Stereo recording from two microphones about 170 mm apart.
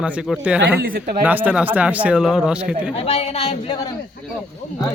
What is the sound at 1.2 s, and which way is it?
Speech, 10° right (ahead or behind).